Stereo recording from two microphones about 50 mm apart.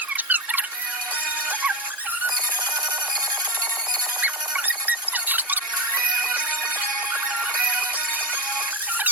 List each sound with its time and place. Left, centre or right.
0.3 s a sound: right
4.2 s squeak: right
7.6 s music: right